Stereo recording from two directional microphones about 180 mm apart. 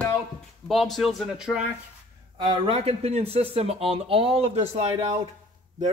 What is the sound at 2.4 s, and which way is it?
Speech, 30° right (ahead or behind).